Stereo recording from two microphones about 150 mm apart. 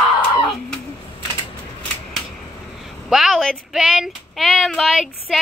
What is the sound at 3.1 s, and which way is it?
Child singing, centre (ahead or behind).